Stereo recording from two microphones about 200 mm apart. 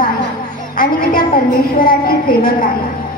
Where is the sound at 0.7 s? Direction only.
45° left (ahead or behind).